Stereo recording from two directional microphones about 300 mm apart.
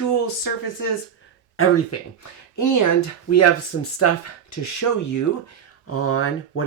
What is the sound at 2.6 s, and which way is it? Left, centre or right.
Speech, left.